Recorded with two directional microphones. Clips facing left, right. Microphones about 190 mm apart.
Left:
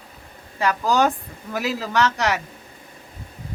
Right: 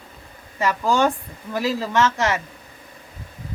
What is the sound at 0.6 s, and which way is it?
A man's voice, centre (ahead or behind).